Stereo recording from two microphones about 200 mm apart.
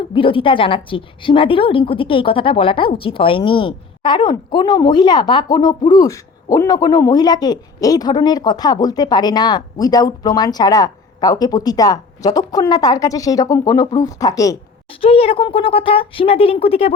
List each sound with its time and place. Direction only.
0.1 s a woman's voice: 25° left (ahead or behind)
15.0 s a woman's voice: 30° left (ahead or behind)